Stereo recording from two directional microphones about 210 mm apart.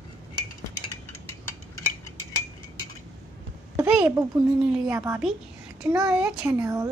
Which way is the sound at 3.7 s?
5° right (ahead or behind).